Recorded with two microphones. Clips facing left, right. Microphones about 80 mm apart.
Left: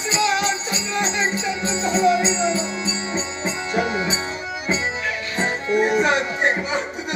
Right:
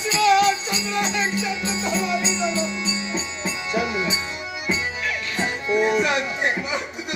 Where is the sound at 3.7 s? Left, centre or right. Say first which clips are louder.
Left 1 dB; left.